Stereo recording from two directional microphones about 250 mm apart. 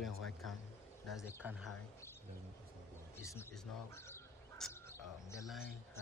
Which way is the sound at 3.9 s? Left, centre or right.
Centre.